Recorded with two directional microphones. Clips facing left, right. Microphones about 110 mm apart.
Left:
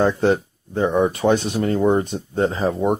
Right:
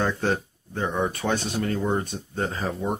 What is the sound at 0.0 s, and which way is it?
Speech, 20° left (ahead or behind).